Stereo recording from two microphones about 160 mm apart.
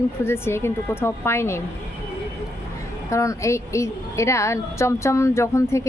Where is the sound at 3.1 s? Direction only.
20° left (ahead or behind).